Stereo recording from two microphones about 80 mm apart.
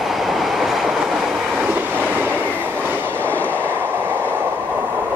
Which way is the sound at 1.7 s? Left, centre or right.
Right.